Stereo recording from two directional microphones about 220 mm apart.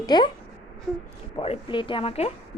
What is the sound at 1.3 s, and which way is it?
Speech, 25° left (ahead or behind).